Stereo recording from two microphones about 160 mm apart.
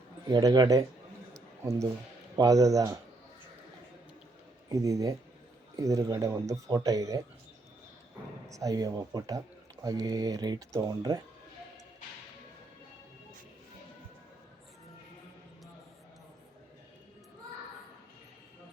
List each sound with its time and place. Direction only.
0.3 s speech: 25° right (ahead or behind)
1.3 s a sound: 20° right (ahead or behind)
2.3 s speech: 20° right (ahead or behind)
4.7 s speech: 20° right (ahead or behind)
8.4 s speech: 20° right (ahead or behind)